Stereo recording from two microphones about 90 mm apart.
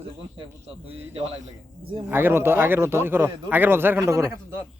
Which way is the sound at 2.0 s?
25° right (ahead or behind).